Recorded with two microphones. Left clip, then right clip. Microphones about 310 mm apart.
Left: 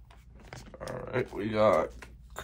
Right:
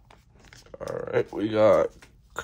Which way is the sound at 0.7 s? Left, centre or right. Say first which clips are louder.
Right 7 dB; centre.